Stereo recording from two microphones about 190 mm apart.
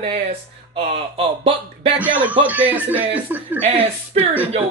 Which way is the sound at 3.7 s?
30° right (ahead or behind).